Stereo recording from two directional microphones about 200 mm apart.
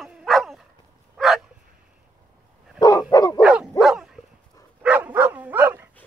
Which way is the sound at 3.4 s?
5° right (ahead or behind).